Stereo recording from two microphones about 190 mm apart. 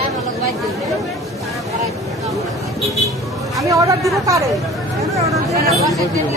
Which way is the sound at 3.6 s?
15° right (ahead or behind).